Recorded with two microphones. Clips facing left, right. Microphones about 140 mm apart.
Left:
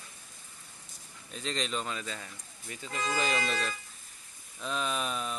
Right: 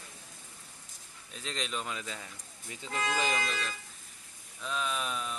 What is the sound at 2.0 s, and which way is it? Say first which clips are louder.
Speech: left 2 dB; 15° right (ahead or behind).